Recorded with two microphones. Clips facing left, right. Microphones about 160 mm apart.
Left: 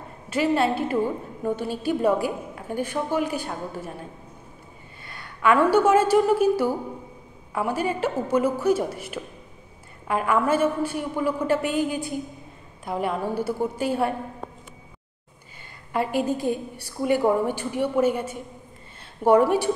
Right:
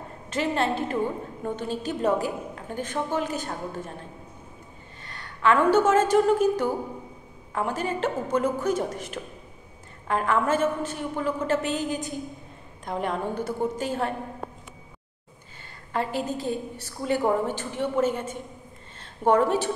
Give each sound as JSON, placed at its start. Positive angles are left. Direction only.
{"t": 0.3, "sound": "a woman's voice", "side_deg": 10}
{"t": 5.0, "sound": "a woman's voice", "side_deg": 10}
{"t": 15.9, "sound": "a woman's voice", "side_deg": 10}